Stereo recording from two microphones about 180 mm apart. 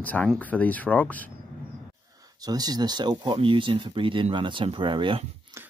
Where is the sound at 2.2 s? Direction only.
20° right (ahead or behind).